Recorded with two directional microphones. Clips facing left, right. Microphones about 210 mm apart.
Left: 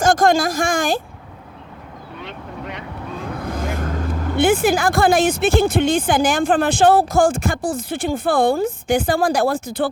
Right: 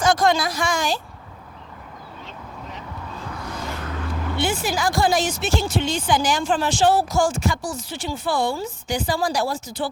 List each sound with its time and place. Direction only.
0.0 s speech: 50° left (ahead or behind)
2.2 s speech: 70° left (ahead or behind)
3.3 s speech: 50° left (ahead or behind)